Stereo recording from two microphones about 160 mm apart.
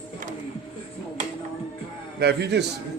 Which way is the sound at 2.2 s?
90° right.